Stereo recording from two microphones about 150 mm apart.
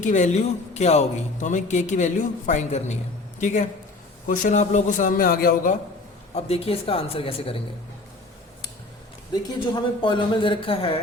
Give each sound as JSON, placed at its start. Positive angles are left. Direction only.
{"t": 0.0, "sound": "a man's voice", "side_deg": 50}
{"t": 6.3, "sound": "speech", "side_deg": 40}
{"t": 9.3, "sound": "speech", "side_deg": 30}